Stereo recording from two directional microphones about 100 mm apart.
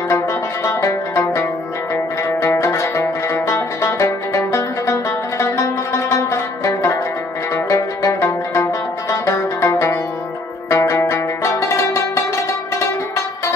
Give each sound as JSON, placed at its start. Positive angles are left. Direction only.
{"t": 0.7, "sound": "music", "side_deg": 30}
{"t": 2.4, "sound": "zither", "side_deg": 25}
{"t": 8.0, "sound": "zither", "side_deg": 25}
{"t": 9.2, "sound": "music", "side_deg": 30}
{"t": 10.7, "sound": "zither", "side_deg": 25}